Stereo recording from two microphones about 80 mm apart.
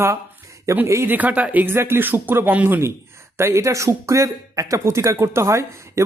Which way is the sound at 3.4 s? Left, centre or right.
Right.